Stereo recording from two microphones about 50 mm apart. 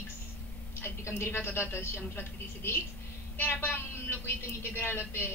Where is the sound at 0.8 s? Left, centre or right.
Left.